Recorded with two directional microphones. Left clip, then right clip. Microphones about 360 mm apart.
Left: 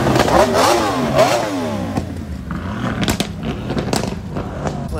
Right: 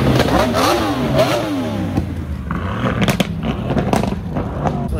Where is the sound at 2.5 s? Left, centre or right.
Centre.